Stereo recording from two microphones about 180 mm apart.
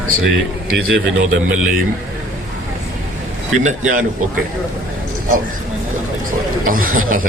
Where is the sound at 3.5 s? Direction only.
40° right (ahead or behind).